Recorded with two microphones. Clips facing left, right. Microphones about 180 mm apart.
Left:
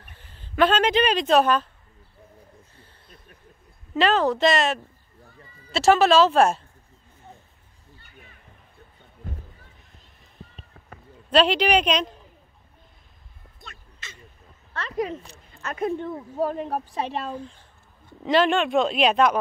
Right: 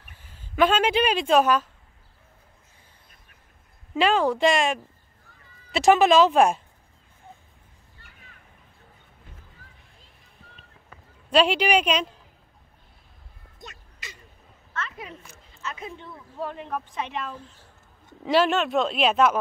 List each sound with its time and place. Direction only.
0.0 s speech: 10° right (ahead or behind)
3.9 s speech: 10° right (ahead or behind)
11.2 s speech: 10° right (ahead or behind)
13.6 s a sound: 15° right (ahead or behind)
14.7 s a sound: 35° left (ahead or behind)
15.5 s speech: 55° left (ahead or behind); by 17.4 s 35° left (ahead or behind)
17.4 s speech: 5° right (ahead or behind)